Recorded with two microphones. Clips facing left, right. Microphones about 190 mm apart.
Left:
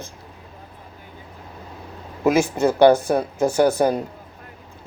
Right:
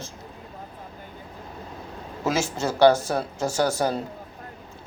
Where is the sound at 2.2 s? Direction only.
15° left (ahead or behind).